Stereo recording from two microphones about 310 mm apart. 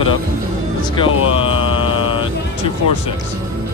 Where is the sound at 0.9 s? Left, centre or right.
Centre.